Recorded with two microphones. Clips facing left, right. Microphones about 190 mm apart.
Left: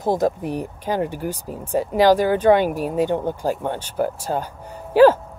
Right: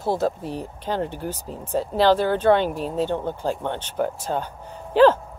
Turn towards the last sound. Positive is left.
turn(degrees=10)  # may be behind; listen again after turning